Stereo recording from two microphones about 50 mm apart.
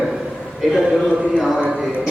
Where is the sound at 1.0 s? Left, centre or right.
Right.